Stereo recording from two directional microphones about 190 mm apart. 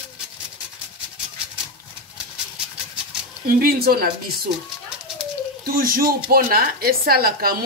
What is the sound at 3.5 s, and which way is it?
Speech, 50° right (ahead or behind).